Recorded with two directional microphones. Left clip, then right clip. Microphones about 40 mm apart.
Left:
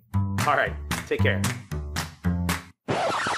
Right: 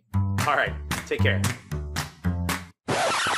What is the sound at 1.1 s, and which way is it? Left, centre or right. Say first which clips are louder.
Speech: even; left.